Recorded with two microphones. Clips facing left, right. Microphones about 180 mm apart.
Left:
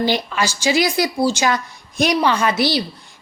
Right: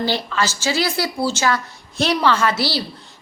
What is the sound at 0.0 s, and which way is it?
A woman's voice, 15° left (ahead or behind).